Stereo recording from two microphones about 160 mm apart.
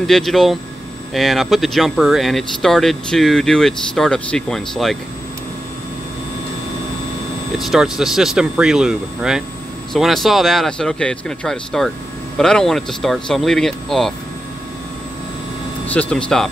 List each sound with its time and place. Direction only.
0.0 s speech: centre (ahead or behind)
7.5 s speech: centre (ahead or behind)
15.9 s speech: 10° left (ahead or behind)